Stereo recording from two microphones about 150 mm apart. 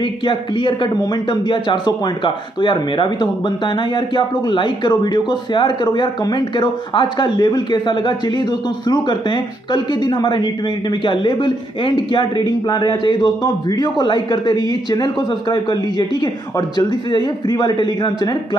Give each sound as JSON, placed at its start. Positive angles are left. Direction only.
{"t": 0.0, "sound": "speech", "side_deg": 35}